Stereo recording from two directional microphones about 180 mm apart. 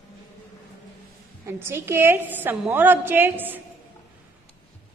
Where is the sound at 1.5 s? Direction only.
15° right (ahead or behind).